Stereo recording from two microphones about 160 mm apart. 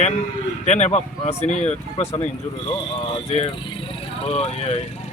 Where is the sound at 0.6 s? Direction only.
45° left (ahead or behind).